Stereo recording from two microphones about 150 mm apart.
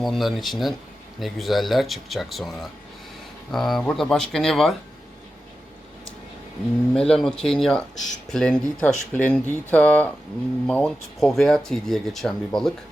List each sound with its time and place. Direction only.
0.0 s speech: centre (ahead or behind)
6.9 s speech: 5° left (ahead or behind)
7.9 s speech: 55° left (ahead or behind)
8.3 s speech: 5° left (ahead or behind)